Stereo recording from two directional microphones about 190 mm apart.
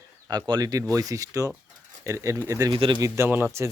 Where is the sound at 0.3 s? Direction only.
20° right (ahead or behind).